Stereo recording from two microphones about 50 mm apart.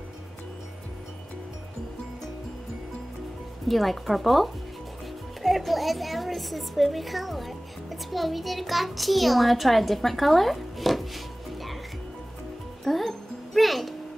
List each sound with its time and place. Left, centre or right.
3.6 s a woman's voice: centre
12.8 s music: centre